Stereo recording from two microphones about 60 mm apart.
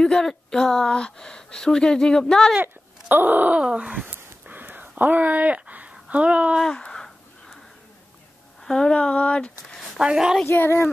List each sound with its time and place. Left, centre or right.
0.0 s speech: centre
2.6 s speech: right
3.6 s a sound: centre
6.6 s a sound: centre
8.6 s speech: centre
9.9 s a woman's voice: centre